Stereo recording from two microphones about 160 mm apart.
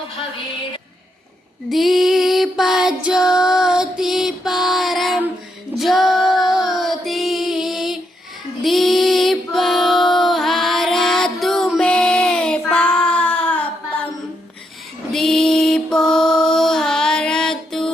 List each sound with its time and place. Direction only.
1.7 s music: centre (ahead or behind)
5.7 s female singing: centre (ahead or behind)
8.6 s music: centre (ahead or behind)
15.1 s mantra: 5° left (ahead or behind)